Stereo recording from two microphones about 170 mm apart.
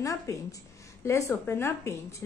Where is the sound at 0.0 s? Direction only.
20° left (ahead or behind).